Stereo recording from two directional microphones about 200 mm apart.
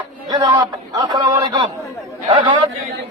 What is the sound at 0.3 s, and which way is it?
A man's voice, 15° right (ahead or behind).